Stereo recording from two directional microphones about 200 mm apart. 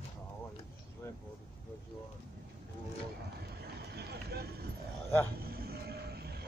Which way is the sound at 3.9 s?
55° right (ahead or behind).